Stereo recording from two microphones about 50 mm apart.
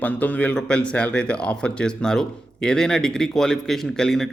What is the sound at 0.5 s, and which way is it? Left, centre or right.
Speech, left.